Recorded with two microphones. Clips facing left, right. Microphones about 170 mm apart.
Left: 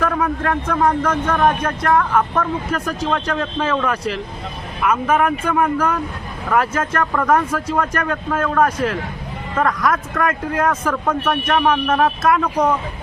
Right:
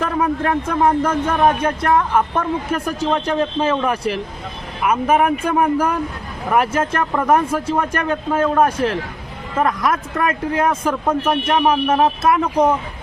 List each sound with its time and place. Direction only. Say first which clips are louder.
0.0 s a man's voice: right 1 dB; 25° right (ahead or behind)
4.9 s speech: right 1 dB; 15° right (ahead or behind)
6.5 s a man's voice: right 1 dB; 25° right (ahead or behind)
10.2 s a man's voice: right 1 dB; 25° right (ahead or behind)